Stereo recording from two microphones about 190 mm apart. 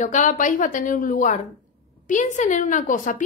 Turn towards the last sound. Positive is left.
turn(degrees=45)  # may be behind; listen again after turning